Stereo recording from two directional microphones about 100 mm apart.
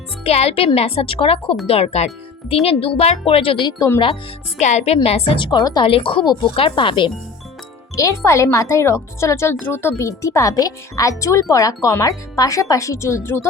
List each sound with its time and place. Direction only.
0.3 s speech: 90° left; by 1.5 s 65° left (ahead or behind)
1.6 s speech: 85° left; by 3.6 s 70° left (ahead or behind)
3.6 s speech: 45° left (ahead or behind)
5.0 s speech: 80° left
5.4 s speech: 45° left (ahead or behind)
5.8 s speech: 60° left (ahead or behind)
7.9 s speech: 30° left (ahead or behind)